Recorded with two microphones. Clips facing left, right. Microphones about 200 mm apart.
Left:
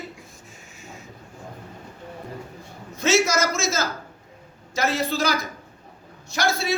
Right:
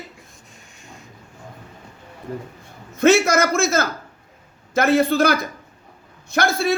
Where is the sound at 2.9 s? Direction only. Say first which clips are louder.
Right 6 dB; 55° right (ahead or behind).